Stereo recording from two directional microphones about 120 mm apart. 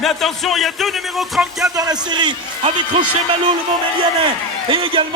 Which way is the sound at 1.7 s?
30° right (ahead or behind).